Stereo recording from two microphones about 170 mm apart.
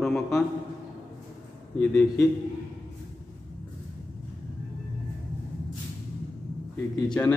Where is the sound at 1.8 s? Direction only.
5° left (ahead or behind).